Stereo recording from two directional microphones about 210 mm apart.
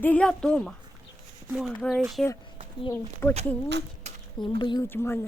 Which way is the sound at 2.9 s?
10° left (ahead or behind).